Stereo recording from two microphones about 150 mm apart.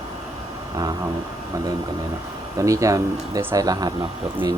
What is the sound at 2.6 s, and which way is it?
Speech, 20° right (ahead or behind).